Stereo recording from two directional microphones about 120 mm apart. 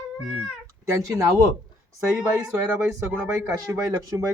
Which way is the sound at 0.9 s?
25° right (ahead or behind).